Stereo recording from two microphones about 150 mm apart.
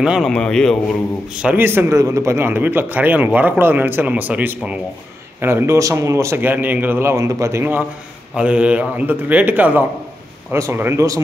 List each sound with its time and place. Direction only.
0.0 s a man's voice: centre (ahead or behind)
1.4 s speech: 10° right (ahead or behind)